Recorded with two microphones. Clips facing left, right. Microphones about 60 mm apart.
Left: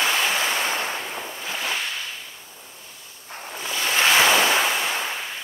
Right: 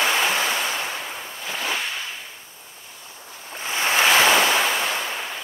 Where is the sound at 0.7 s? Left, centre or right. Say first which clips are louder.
Left 1 dB; left.